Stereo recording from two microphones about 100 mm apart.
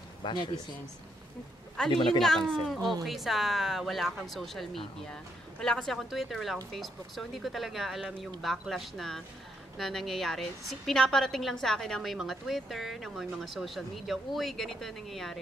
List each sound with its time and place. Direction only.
0.2 s speech: 50° left (ahead or behind)
1.8 s a woman's voice: 5° left (ahead or behind)